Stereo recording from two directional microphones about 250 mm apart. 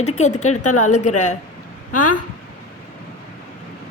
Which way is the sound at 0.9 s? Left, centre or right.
Left.